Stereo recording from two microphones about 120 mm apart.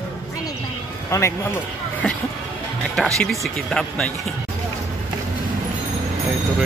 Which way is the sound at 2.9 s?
5° left (ahead or behind).